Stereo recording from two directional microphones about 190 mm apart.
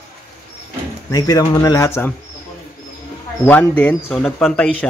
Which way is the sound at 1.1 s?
20° left (ahead or behind).